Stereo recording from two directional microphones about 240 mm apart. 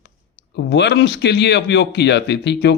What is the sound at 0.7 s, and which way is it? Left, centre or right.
Speech, left.